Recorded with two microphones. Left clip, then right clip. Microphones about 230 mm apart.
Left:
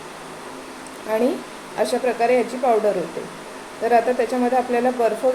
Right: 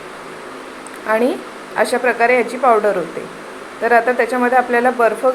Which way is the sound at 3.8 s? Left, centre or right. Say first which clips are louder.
Right 4 dB; centre.